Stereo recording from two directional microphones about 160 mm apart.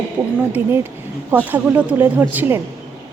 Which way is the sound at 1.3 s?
10° right (ahead or behind).